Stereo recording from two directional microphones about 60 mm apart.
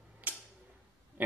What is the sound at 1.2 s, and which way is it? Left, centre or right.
Pig, right.